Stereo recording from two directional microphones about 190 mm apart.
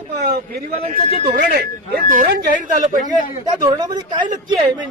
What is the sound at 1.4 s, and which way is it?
Speech, 55° right (ahead or behind).